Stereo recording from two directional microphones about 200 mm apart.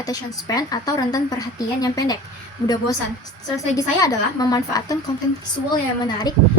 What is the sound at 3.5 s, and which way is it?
A woman's voice, 15° left (ahead or behind).